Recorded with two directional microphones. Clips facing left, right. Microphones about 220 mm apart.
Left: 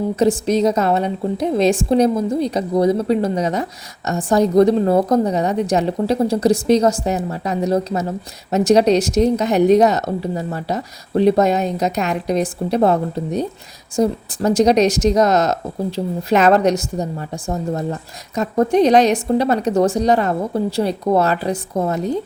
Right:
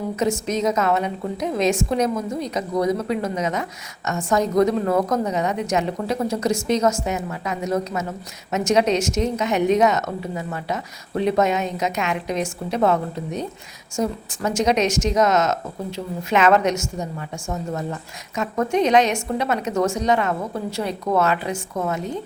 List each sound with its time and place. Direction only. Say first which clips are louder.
0.2 s a woman's voice: left 6 dB; 35° left (ahead or behind)